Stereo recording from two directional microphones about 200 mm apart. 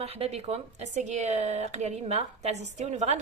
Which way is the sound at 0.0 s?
30° right (ahead or behind).